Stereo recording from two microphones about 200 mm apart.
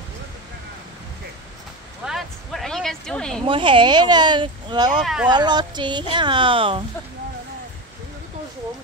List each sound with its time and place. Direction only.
2.0 s a sound: centre (ahead or behind)
3.4 s speech: 25° right (ahead or behind)
5.0 s speech: 5° right (ahead or behind)
5.3 s speech: 20° right (ahead or behind)